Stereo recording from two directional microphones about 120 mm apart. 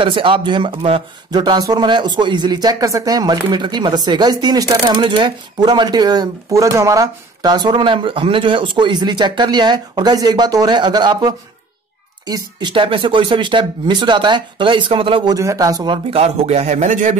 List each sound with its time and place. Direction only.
0.0 s speech: 45° right (ahead or behind)
1.3 s speech: 35° right (ahead or behind)
15.3 s a man's voice: 30° right (ahead or behind)
16.1 s a man's voice: 60° right (ahead or behind); by 17.2 s 85° right